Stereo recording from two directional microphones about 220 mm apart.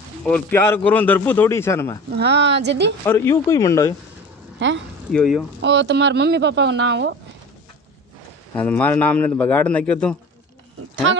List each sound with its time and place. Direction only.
0.2 s a man's voice: 10° left (ahead or behind)
2.1 s speech: 50° right (ahead or behind)
3.1 s a man's voice: 10° left (ahead or behind)
4.6 s speech: 55° right (ahead or behind)
5.1 s speech: centre (ahead or behind)
5.6 s speech: 55° right (ahead or behind)
8.6 s a man's voice: 5° left (ahead or behind)